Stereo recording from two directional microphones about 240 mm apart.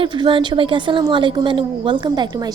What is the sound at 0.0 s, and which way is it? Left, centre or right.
A woman's voice, right.